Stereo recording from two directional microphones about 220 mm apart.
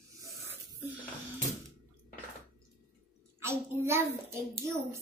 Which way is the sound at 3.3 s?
10° right (ahead or behind).